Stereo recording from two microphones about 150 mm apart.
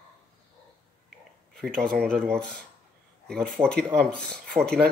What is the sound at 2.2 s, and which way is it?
Speech, 5° left (ahead or behind).